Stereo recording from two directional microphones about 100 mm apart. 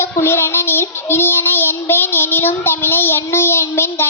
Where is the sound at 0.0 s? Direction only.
25° left (ahead or behind).